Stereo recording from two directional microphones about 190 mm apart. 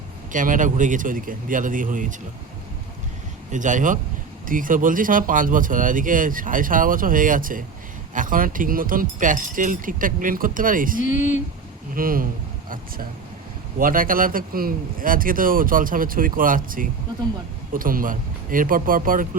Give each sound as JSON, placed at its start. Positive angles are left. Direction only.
{"t": 0.3, "sound": "speech", "side_deg": -45}
{"t": 3.5, "sound": "speech", "side_deg": -40}
{"t": 11.0, "sound": "speech", "side_deg": 40}
{"t": 11.9, "sound": "speech", "side_deg": -50}
{"t": 13.7, "sound": "speech", "side_deg": -45}